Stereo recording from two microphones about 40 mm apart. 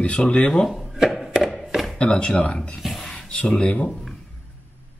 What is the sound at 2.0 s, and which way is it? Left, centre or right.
Speech, left.